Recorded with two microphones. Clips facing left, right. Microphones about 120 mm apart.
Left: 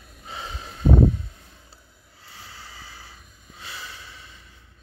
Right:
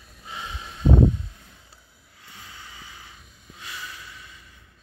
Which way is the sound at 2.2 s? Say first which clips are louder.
Left 1 dB; 30° left (ahead or behind).